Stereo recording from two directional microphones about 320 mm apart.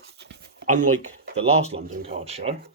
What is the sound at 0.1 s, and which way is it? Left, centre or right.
Writing, right.